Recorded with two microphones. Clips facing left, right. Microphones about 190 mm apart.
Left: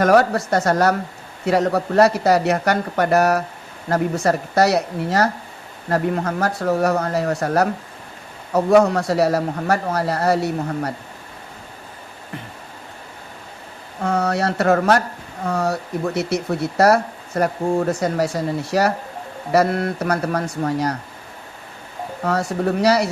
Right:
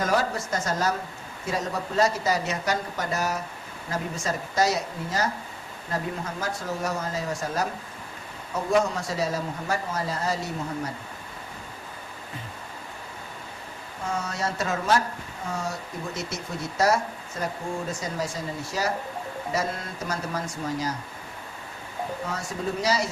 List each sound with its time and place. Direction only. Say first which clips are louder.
0.0 s speech: left 10 dB; 65° left (ahead or behind)
14.0 s speech: left 10 dB; 65° left (ahead or behind)
22.2 s speech: left 15 dB; 65° left (ahead or behind)